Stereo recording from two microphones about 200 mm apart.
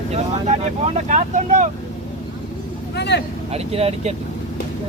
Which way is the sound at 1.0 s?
40° right (ahead or behind).